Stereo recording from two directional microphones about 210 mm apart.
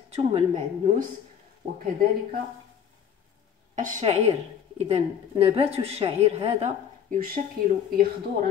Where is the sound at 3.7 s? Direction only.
35° right (ahead or behind).